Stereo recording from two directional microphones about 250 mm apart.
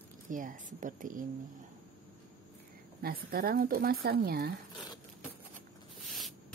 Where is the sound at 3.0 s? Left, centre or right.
Right.